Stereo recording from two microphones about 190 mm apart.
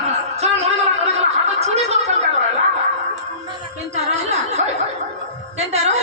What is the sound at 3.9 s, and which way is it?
Music, 35° right (ahead or behind).